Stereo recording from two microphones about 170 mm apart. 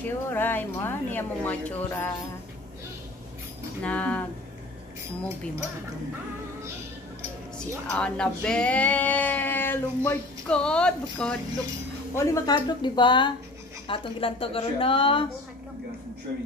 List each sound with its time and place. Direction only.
0.0 s speech: 10° left (ahead or behind)
3.8 s speech: 5° left (ahead or behind)
7.5 s speech: 5° left (ahead or behind)
12.2 s speech: 20° left (ahead or behind)